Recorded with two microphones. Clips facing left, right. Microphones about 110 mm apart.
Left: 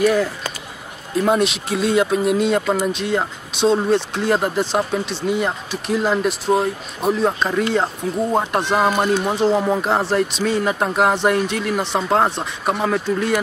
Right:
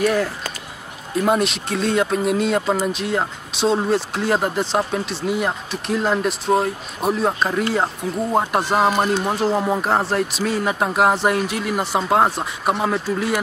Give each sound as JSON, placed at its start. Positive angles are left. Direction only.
{"t": 0.0, "sound": "speech", "side_deg": 0}